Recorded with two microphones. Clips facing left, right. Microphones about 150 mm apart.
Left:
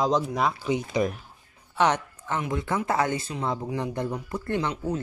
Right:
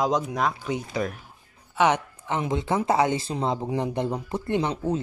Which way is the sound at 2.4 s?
25° right (ahead or behind).